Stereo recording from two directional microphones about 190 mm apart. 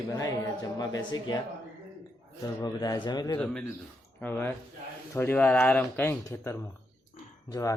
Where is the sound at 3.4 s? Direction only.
5° left (ahead or behind).